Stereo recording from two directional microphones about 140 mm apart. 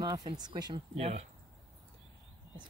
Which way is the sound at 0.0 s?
30° right (ahead or behind).